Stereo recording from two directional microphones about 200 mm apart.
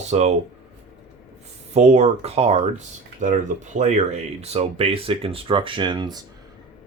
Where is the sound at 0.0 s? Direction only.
35° right (ahead or behind).